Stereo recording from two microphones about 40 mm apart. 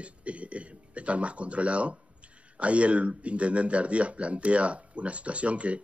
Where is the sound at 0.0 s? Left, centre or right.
Right.